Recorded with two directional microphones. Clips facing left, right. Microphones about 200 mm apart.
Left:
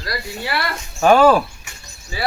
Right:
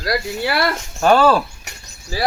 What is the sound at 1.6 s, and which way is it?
Bird, 40° right (ahead or behind).